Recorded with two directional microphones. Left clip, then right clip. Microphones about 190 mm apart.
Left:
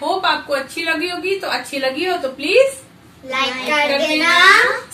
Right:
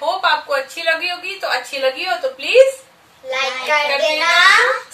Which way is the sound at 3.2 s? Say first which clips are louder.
Even; 10° left (ahead or behind).